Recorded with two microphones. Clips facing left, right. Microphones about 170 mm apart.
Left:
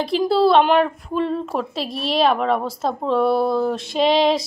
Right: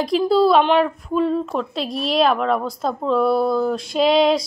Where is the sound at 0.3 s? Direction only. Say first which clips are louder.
Even; centre (ahead or behind).